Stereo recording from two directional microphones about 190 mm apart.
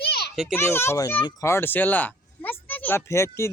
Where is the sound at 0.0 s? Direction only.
55° left (ahead or behind).